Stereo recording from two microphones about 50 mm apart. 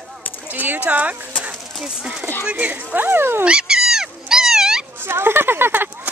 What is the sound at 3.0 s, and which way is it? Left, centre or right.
Speech, right.